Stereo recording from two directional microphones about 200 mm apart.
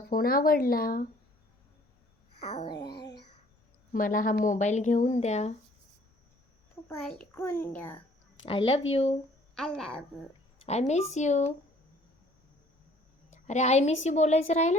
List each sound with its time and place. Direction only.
0.1 s speech: 45° left (ahead or behind)
2.6 s a sound: 20° left (ahead or behind)
3.9 s a woman's voice: 40° left (ahead or behind)
6.8 s a child's voice: 10° left (ahead or behind)
8.4 s a sound: 25° left (ahead or behind)
8.9 s a woman's voice: 30° left (ahead or behind)
9.6 s a woman's voice: 5° left (ahead or behind)
10.6 s a woman's voice: 35° left (ahead or behind)
13.3 s a woman's voice: 35° left (ahead or behind)